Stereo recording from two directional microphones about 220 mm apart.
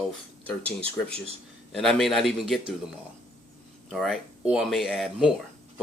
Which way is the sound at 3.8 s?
Centre (ahead or behind).